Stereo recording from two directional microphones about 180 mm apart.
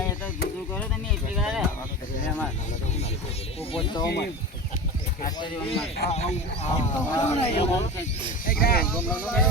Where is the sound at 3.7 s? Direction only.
30° left (ahead or behind).